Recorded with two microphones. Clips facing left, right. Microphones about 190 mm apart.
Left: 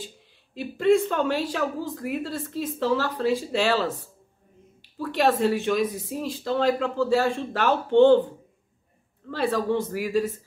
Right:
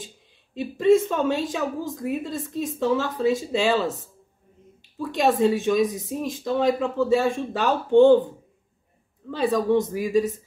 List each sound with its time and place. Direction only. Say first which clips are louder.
0.6 s a man's voice: right 2 dB; 20° right (ahead or behind)
5.0 s a woman's voice: right 2 dB; 20° right (ahead or behind)
9.3 s a woman's voice: right 3 dB; 15° right (ahead or behind)